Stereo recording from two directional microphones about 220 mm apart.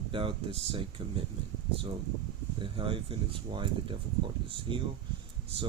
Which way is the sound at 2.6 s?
25° right (ahead or behind).